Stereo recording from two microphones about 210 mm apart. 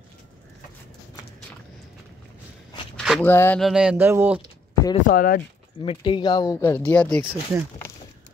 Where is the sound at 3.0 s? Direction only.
5° left (ahead or behind).